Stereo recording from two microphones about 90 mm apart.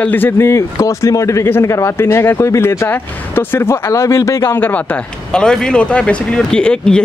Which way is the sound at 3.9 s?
35° left (ahead or behind).